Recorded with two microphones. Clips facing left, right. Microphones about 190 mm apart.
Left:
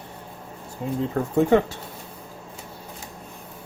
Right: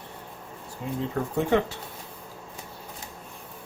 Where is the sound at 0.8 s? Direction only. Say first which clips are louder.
Left 5 dB; 40° left (ahead or behind).